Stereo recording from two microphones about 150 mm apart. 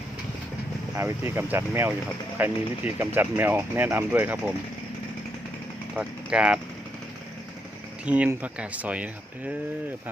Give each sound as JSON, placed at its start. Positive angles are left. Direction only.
{"t": 0.9, "sound": "speech", "side_deg": -15}
{"t": 5.9, "sound": "speech", "side_deg": -5}
{"t": 8.0, "sound": "speech", "side_deg": -10}